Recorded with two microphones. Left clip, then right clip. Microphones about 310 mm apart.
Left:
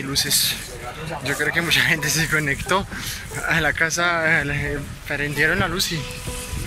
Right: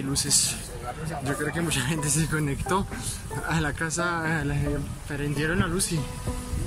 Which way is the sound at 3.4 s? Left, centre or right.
Centre.